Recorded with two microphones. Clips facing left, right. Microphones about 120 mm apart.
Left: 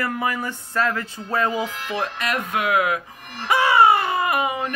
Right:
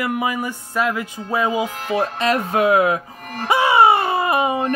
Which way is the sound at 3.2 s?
45° right (ahead or behind).